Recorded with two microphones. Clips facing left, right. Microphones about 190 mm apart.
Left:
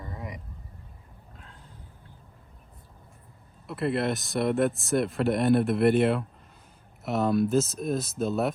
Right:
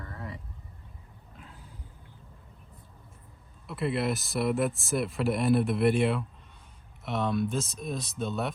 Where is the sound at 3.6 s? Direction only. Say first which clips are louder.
Left 2 dB; centre (ahead or behind).